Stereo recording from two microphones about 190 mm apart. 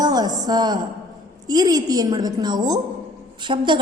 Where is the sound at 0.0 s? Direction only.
20° right (ahead or behind).